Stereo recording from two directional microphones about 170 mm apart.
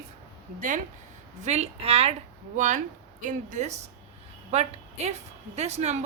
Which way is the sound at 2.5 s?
45° right (ahead or behind).